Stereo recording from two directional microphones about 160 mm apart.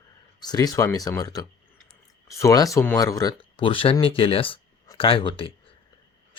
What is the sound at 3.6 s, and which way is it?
Speech, 35° left (ahead or behind).